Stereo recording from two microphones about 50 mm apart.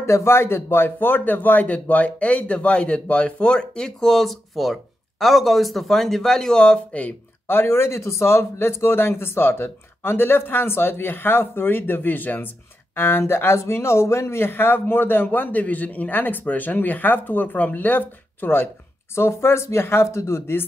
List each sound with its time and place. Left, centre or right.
0.0 s speech: left
7.4 s speech: left
19.1 s speech: left